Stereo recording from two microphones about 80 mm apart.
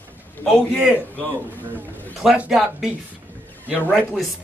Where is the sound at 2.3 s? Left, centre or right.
Centre.